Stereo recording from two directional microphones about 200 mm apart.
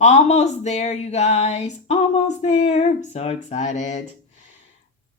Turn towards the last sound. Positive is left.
turn(degrees=35)  # may be behind; listen again after turning